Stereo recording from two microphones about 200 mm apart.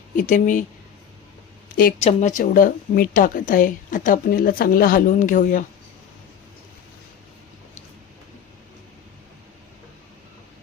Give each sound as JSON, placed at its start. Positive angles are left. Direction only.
{"t": 0.2, "sound": "speech", "side_deg": 40}
{"t": 1.7, "sound": "a woman's voice", "side_deg": 45}